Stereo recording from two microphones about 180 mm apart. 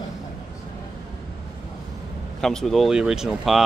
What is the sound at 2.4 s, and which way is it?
Speech, centre (ahead or behind).